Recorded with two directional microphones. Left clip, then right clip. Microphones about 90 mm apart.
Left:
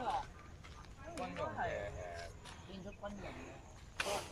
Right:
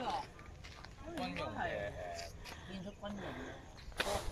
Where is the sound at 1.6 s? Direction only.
5° right (ahead or behind).